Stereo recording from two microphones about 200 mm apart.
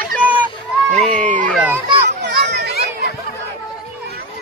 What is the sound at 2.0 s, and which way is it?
Children playing, 55° right (ahead or behind).